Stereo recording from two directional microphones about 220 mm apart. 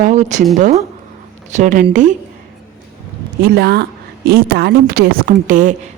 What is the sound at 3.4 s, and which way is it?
A woman's voice, 45° right (ahead or behind).